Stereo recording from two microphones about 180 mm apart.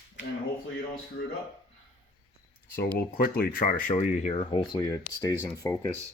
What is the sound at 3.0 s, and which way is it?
Speech, 55° left (ahead or behind).